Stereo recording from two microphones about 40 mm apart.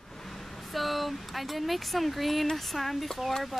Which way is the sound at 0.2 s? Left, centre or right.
Centre.